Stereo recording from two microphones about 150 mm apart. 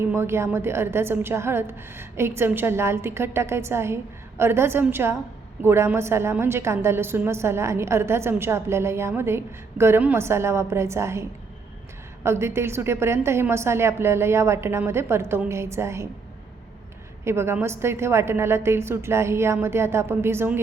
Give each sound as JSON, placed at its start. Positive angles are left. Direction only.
{"t": 0.0, "sound": "a woman's voice", "side_deg": -15}
{"t": 17.2, "sound": "a woman's voice", "side_deg": -15}